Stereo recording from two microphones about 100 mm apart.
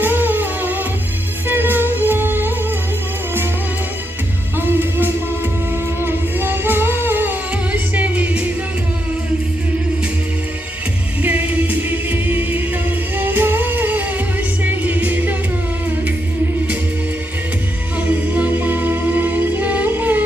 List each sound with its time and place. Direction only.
0.0 s humming: 20° right (ahead or behind)
1.5 s music: 20° right (ahead or behind)
4.6 s music: 20° right (ahead or behind)
6.0 s humming: 20° right (ahead or behind)
11.2 s music: 20° right (ahead or behind)
17.9 s music: 15° right (ahead or behind)